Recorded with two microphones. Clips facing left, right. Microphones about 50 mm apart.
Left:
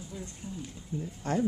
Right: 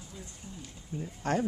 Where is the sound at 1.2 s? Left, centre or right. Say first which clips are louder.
Right 1 dB; right.